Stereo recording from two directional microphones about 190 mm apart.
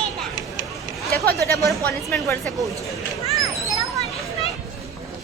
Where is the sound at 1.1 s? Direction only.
50° right (ahead or behind).